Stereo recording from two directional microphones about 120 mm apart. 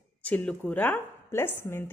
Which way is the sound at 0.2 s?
10° left (ahead or behind).